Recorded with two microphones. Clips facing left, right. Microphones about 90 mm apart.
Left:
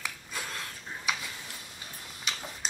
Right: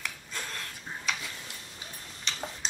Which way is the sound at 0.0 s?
5° left (ahead or behind).